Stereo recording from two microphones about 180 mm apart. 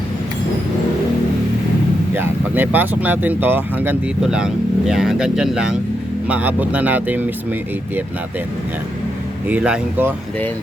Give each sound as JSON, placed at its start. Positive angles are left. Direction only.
{"t": 2.1, "sound": "speech", "side_deg": -10}
{"t": 9.5, "sound": "speech", "side_deg": -5}